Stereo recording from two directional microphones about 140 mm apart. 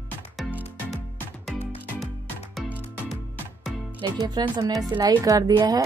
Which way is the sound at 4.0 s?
30° right (ahead or behind).